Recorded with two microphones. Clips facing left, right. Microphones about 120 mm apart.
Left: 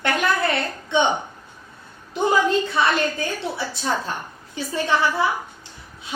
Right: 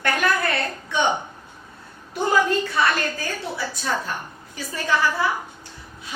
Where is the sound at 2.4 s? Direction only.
25° left (ahead or behind).